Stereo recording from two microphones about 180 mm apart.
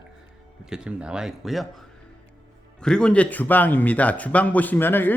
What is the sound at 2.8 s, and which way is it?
A man's voice, 5° left (ahead or behind).